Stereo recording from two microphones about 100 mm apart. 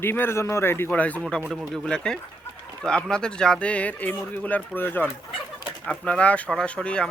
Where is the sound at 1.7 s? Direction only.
5° left (ahead or behind).